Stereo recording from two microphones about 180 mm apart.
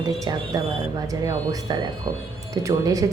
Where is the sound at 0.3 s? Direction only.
20° right (ahead or behind).